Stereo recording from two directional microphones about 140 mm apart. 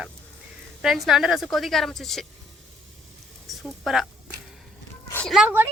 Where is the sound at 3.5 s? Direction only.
Centre (ahead or behind).